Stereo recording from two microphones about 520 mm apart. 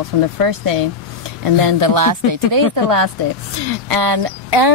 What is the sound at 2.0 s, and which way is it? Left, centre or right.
Speech, right.